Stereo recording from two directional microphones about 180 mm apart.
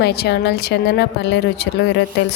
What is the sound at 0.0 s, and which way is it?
Speech, 65° left (ahead or behind).